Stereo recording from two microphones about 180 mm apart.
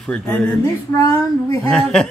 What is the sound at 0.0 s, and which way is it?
Speech, 5° left (ahead or behind).